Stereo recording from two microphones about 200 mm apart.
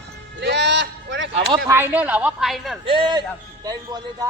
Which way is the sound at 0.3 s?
60° right (ahead or behind).